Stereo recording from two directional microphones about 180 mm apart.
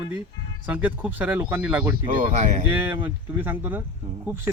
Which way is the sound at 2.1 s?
50° right (ahead or behind).